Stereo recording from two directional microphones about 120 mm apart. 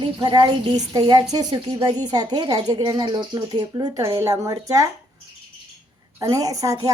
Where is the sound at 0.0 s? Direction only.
40° right (ahead or behind).